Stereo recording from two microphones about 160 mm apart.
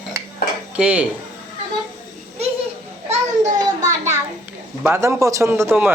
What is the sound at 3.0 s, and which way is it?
Speech, 50° right (ahead or behind).